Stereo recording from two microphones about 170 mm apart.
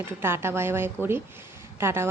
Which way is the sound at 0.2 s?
15° right (ahead or behind).